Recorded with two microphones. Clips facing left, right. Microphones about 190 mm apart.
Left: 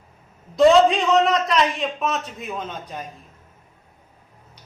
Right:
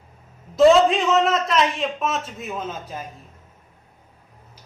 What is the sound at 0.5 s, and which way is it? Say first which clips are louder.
A man's voice: even; centre (ahead or behind).